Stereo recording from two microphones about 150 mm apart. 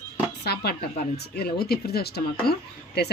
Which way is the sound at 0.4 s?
90° left.